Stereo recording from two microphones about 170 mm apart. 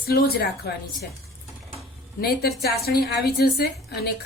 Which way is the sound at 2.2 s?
65° left (ahead or behind).